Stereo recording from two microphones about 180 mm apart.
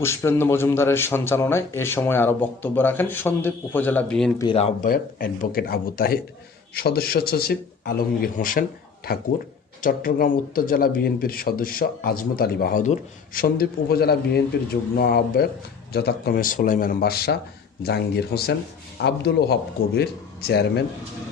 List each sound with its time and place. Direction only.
0.0 s a man's voice: 15° left (ahead or behind)
4.5 s speech: 35° left (ahead or behind)
4.9 s speech: 55° left (ahead or behind)
9.8 s speech: 50° left (ahead or behind)